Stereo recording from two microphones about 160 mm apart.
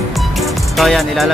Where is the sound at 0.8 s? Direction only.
Centre (ahead or behind).